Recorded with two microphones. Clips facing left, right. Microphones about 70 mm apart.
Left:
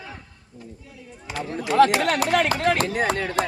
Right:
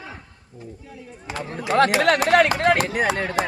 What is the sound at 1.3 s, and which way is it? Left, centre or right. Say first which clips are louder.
Speech: right 1 dB; right.